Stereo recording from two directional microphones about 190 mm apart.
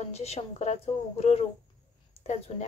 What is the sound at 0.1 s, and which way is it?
Speech, 35° left (ahead or behind).